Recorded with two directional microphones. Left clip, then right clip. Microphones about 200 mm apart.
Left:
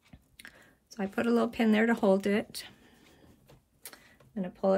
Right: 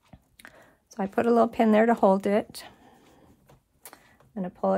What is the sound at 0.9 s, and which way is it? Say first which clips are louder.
Speech: right 7 dB; 45° right (ahead or behind).